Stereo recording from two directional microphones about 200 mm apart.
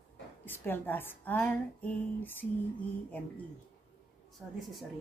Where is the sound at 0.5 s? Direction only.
10° left (ahead or behind).